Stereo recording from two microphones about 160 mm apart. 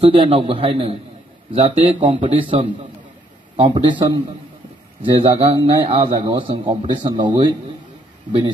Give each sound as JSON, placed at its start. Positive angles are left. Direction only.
{"t": 0.0, "sound": "a man's voice", "side_deg": -35}